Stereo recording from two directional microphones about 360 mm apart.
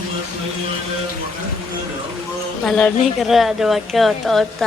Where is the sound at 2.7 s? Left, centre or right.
Centre.